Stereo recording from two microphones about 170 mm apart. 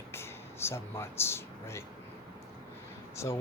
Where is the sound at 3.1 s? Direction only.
15° left (ahead or behind).